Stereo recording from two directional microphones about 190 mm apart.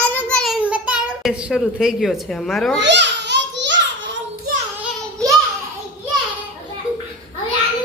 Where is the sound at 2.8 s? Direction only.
65° right (ahead or behind).